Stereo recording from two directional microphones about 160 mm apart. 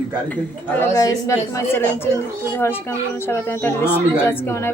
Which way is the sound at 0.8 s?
20° left (ahead or behind).